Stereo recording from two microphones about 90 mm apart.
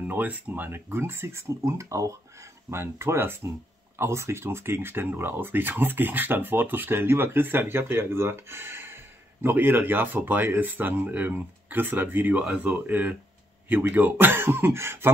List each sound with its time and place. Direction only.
0.1 s speech: 20° right (ahead or behind)